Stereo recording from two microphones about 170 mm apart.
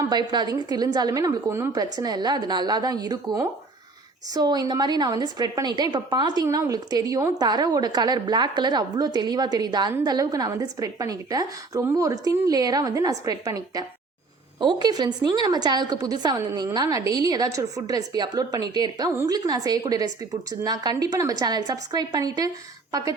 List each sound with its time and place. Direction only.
0.1 s a woman's voice: 25° right (ahead or behind)